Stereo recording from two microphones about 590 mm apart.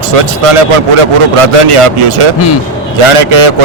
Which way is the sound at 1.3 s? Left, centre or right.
Right.